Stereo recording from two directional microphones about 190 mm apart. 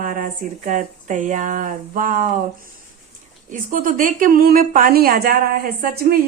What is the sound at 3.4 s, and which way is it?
Speech, 45° right (ahead or behind).